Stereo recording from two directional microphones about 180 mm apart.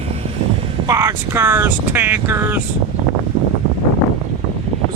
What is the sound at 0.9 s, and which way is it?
Speech, 15° right (ahead or behind).